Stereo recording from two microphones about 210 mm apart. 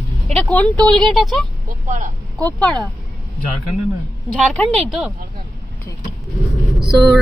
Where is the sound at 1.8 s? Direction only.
35° right (ahead or behind).